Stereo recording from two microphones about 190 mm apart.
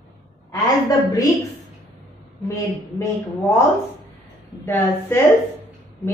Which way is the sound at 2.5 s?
15° left (ahead or behind).